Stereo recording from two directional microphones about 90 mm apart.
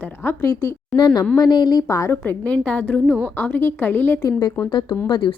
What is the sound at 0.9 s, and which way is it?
Speech, 55° left (ahead or behind).